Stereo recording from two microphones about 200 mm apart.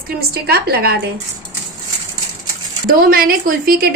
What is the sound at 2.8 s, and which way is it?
A woman's voice, 45° right (ahead or behind).